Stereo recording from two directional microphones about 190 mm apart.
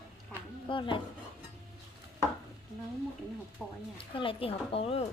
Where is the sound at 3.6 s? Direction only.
Centre (ahead or behind).